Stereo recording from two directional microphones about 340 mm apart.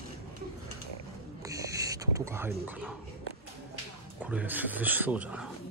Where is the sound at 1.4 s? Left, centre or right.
Centre.